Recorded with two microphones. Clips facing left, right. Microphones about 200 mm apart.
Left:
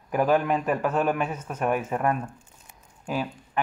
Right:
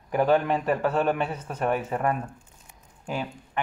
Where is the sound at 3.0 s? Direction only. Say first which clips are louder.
Left 2 dB; 20° right (ahead or behind).